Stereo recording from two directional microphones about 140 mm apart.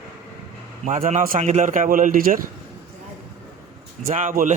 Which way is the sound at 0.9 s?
60° right (ahead or behind).